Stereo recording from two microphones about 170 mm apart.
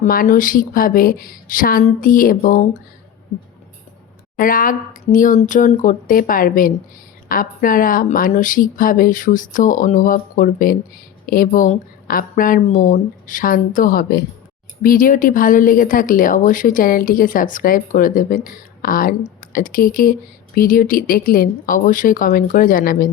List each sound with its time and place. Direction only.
0.0 s a woman's voice: 55° left (ahead or behind)
4.4 s a woman's voice: 55° left (ahead or behind)